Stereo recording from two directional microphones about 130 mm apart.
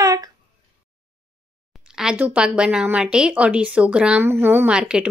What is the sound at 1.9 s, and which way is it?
Speech, 5° right (ahead or behind).